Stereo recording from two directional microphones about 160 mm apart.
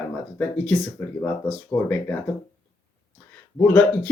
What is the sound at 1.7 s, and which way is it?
Speech, 15° left (ahead or behind).